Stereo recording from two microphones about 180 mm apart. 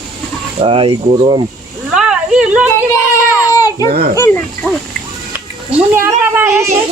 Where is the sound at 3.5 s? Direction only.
20° left (ahead or behind).